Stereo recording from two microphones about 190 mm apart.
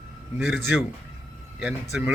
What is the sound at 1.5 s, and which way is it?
Speech, 5° right (ahead or behind).